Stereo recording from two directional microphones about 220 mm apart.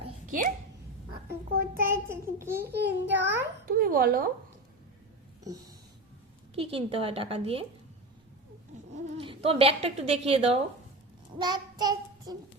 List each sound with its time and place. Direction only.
0.3 s a sound: 35° right (ahead or behind)
1.3 s child singing: 40° right (ahead or behind)
2.4 s babbling: 10° right (ahead or behind)
2.7 s a child's voice: 50° right (ahead or behind)
3.7 s speech: 40° right (ahead or behind)
6.6 s a woman's voice: 25° right (ahead or behind)
9.1 s a woman's voice: 25° right (ahead or behind)
11.4 s child singing: 20° right (ahead or behind)